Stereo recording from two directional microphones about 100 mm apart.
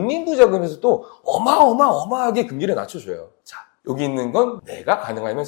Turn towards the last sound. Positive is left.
turn(degrees=20)  # may be behind; listen again after turning